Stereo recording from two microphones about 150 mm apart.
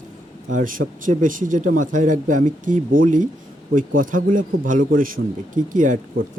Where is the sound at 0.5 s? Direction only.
65° right (ahead or behind).